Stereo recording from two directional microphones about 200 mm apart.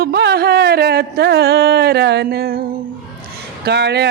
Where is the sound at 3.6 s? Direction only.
55° right (ahead or behind).